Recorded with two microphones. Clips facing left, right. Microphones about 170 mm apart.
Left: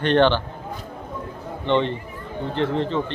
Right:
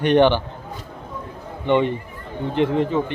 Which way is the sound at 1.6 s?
10° right (ahead or behind).